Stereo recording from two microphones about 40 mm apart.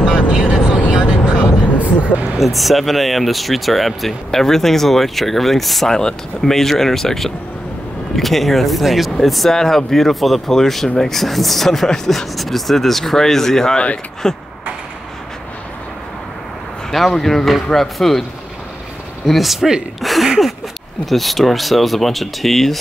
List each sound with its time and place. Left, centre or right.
0.0 s vehicle: centre
2.3 s speech: centre
5.9 s speech: centre
6.5 s speech: centre
9.5 s speech: centre
16.9 s speech: centre
19.2 s speech: centre
20.0 s a sound: centre
21.0 s speech: centre